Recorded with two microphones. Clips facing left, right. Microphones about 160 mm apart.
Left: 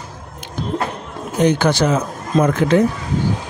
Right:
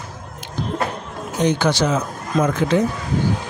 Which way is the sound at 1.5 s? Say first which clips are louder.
Left 2 dB; 50° left (ahead or behind).